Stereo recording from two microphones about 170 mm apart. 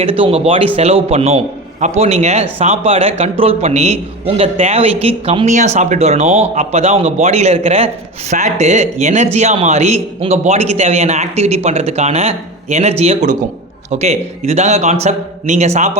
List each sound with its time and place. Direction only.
0.0 s speech: 35° right (ahead or behind)